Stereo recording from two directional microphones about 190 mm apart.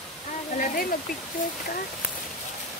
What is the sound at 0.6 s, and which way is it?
Waterfall, 50° left (ahead or behind).